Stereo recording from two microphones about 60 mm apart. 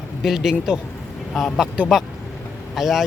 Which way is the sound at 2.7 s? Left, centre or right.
Centre.